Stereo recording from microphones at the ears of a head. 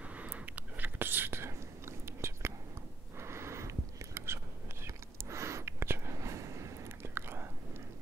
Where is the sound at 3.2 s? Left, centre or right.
Right.